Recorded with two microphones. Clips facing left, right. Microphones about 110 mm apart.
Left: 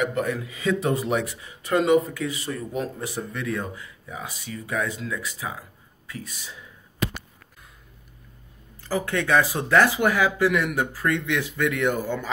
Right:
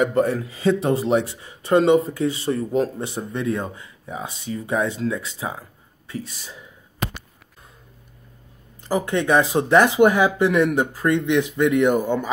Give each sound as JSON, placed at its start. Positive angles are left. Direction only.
{"t": 0.0, "sound": "speech", "side_deg": -35}
{"t": 8.8, "sound": "speech", "side_deg": -20}